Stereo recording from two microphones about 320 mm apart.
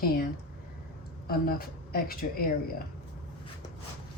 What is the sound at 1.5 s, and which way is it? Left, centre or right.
Speech, left.